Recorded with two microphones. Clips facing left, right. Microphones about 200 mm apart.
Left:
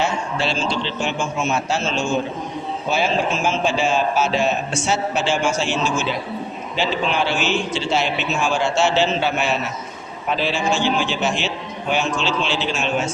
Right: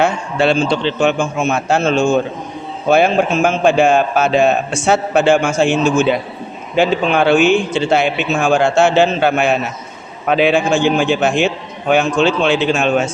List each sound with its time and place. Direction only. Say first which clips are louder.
0.0 s a man's voice: right 7 dB; 55° right (ahead or behind)